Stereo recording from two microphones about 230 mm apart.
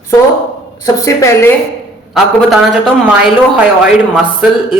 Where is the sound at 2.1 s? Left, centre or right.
Centre.